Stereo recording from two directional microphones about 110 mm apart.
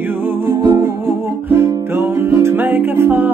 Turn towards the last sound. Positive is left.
turn(degrees=-20)  # may be behind; listen again after turning